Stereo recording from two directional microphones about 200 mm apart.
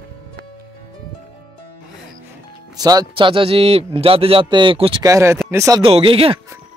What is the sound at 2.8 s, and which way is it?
A man's voice, 20° right (ahead or behind).